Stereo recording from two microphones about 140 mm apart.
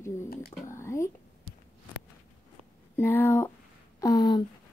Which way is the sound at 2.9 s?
15° left (ahead or behind).